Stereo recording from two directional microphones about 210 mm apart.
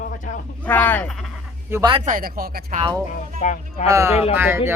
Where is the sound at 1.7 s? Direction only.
20° right (ahead or behind).